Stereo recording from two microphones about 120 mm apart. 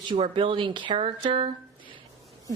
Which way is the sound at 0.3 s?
45° right (ahead or behind).